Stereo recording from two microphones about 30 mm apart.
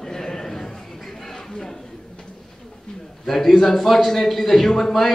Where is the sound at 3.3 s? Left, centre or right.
Centre.